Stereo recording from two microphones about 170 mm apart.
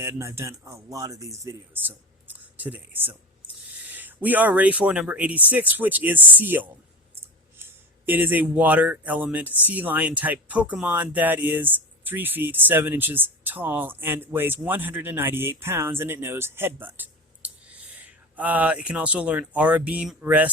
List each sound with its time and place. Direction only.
0.0 s speech: 15° right (ahead or behind)